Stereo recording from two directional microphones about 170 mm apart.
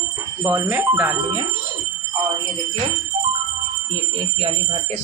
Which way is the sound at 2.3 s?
30° right (ahead or behind).